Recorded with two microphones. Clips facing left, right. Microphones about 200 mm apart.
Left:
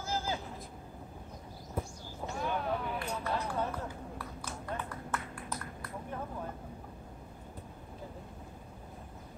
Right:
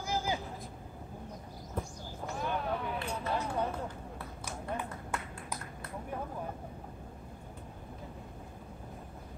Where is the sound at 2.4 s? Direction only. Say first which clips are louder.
Even; centre (ahead or behind).